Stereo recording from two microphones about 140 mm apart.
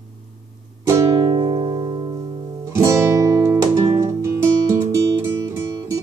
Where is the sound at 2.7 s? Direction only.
20° right (ahead or behind).